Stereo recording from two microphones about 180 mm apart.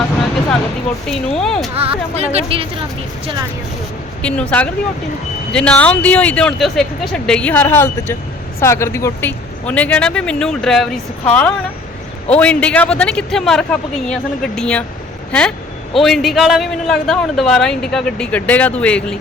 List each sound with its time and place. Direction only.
1.0 s a man's voice: 5° left (ahead or behind)
1.7 s speech: 35° right (ahead or behind)
4.2 s a man's voice: 5° left (ahead or behind)